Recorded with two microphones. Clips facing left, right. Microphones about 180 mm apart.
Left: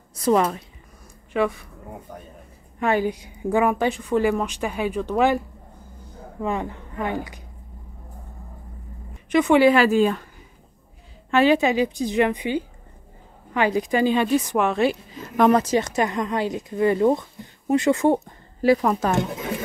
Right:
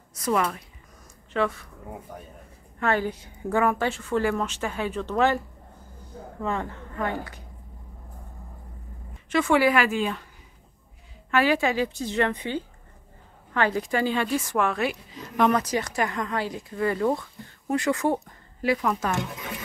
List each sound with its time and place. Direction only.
0.1 s a woman's voice: 30° left (ahead or behind)
1.3 s a woman's voice: 15° left (ahead or behind)
2.8 s a woman's voice: 15° left (ahead or behind)
6.4 s a woman's voice: 15° left (ahead or behind)
9.3 s speech: 20° left (ahead or behind)
9.8 s speech: 40° left (ahead or behind)
11.2 s a woman's voice: 25° left (ahead or behind)
15.3 s speech: 40° left (ahead or behind)
15.6 s speech: 25° left (ahead or behind)
18.6 s speech: 35° left (ahead or behind)